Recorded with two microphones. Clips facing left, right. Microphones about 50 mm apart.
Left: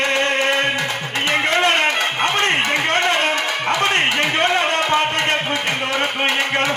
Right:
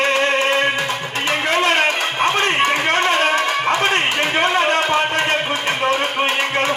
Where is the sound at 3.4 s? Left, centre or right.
Right.